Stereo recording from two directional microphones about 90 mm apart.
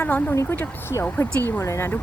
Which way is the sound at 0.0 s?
20° left (ahead or behind).